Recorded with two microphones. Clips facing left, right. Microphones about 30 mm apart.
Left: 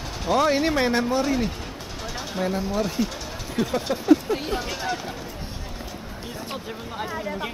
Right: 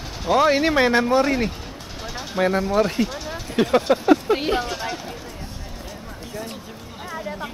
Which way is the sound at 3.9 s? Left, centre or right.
Right.